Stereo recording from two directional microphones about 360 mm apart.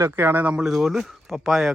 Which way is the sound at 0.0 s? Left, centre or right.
Centre.